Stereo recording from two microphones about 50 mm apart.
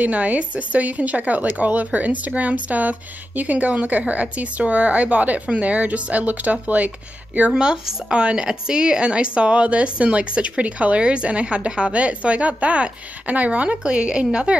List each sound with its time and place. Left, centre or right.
0.0 s speech: right
7.5 s speech: centre